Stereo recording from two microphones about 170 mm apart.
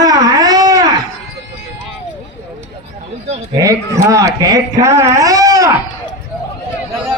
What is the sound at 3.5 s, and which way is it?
Speech, 20° right (ahead or behind).